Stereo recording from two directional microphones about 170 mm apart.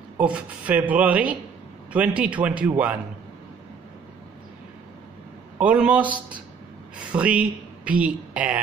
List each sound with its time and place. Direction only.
0.2 s speech: 10° right (ahead or behind)
5.6 s speech: 10° right (ahead or behind)
6.0 s speech: 30° right (ahead or behind)
7.1 s speech: 5° right (ahead or behind)